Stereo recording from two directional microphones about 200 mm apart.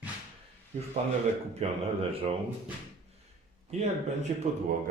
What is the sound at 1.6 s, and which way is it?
Speech, 30° right (ahead or behind).